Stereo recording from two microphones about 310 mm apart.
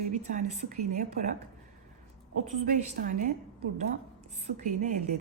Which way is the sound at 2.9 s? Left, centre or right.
Right.